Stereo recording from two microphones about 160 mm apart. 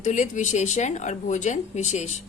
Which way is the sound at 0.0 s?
50° left (ahead or behind).